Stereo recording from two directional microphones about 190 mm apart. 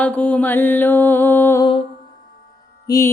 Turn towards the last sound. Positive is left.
turn(degrees=15)  # may be behind; listen again after turning